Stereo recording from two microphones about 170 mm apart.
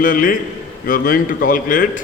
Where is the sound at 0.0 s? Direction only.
55° left (ahead or behind).